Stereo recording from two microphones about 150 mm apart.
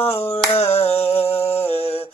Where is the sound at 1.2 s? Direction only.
45° left (ahead or behind).